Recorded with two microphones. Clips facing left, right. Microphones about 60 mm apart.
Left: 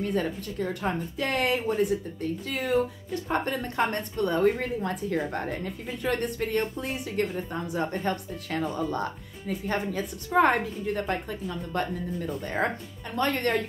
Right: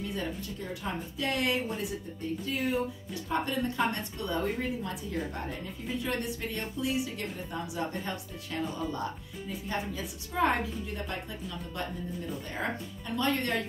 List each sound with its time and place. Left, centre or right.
0.0 s a woman's voice: left
2.4 s speech: left
3.3 s a woman's voice: left
8.0 s a woman's voice: left
13.1 s a woman's voice: left